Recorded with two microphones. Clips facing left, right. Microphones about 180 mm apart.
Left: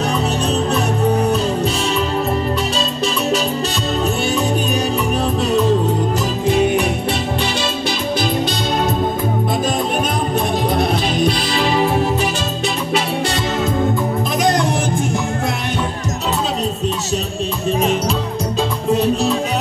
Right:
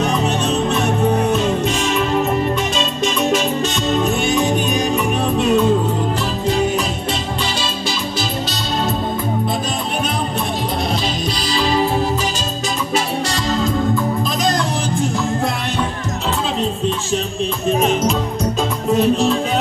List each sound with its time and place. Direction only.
0.0 s music: 35° left (ahead or behind)
4.0 s music: 35° left (ahead or behind)
10.8 s music: 55° left (ahead or behind)
18.9 s music: 35° left (ahead or behind)